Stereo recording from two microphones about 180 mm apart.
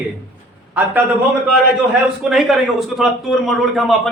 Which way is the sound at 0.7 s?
10° right (ahead or behind).